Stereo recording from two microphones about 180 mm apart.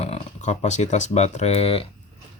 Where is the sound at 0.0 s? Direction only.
40° left (ahead or behind).